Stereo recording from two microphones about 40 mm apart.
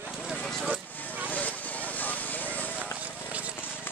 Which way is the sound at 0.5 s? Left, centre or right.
Centre.